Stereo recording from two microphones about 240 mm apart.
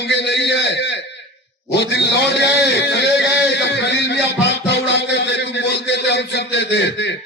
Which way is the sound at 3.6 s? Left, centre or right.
Left.